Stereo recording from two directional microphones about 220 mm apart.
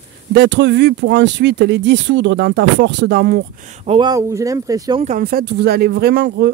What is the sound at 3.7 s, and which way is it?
Speech, 25° right (ahead or behind).